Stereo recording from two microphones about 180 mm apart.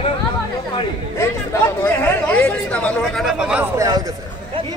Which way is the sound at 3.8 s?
20° right (ahead or behind).